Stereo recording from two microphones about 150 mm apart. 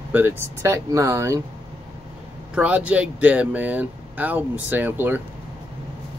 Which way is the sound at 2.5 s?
10° right (ahead or behind).